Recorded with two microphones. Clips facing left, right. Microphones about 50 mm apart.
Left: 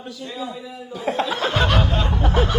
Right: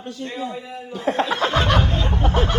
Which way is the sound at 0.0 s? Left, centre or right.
Right.